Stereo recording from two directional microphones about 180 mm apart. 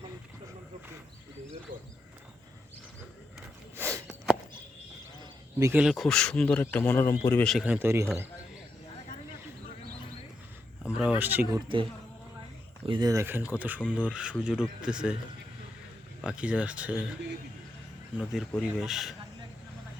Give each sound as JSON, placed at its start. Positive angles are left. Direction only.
{"t": 1.7, "sound": "a sound", "side_deg": -50}
{"t": 3.8, "sound": "a sound", "side_deg": -10}
{"t": 5.5, "sound": "speech", "side_deg": -15}
{"t": 5.8, "sound": "a man's voice", "side_deg": 0}
{"t": 7.4, "sound": "speech", "side_deg": 0}
{"t": 10.8, "sound": "speech", "side_deg": -5}
{"t": 12.8, "sound": "speech", "side_deg": -25}
{"t": 16.2, "sound": "speech", "side_deg": -5}
{"t": 18.2, "sound": "speech", "side_deg": 0}